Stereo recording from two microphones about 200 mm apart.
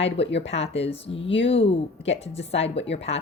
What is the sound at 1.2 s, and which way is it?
Speech, 70° left (ahead or behind).